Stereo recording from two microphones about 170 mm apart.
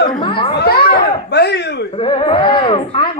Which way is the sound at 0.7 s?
65° left (ahead or behind).